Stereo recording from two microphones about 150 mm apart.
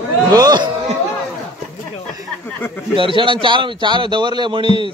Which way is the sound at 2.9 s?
35° right (ahead or behind).